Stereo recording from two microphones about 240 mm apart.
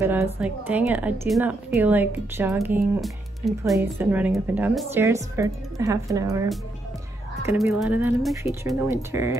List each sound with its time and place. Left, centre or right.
0.0 s speech: centre
7.8 s speech: centre